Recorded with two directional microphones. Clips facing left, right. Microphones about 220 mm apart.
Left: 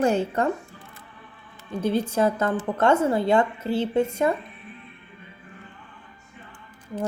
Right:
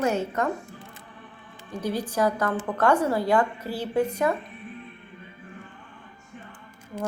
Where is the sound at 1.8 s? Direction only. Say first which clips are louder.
Left 3 dB; 25° left (ahead or behind).